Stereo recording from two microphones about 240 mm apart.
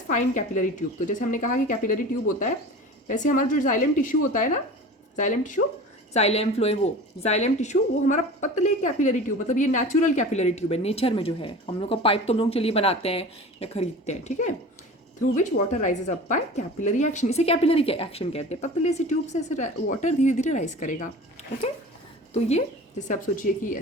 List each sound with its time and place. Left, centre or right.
0.1 s speech: left
3.1 s a woman's voice: left
22.3 s a woman's voice: left